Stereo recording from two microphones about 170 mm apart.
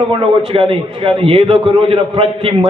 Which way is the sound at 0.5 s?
35° right (ahead or behind).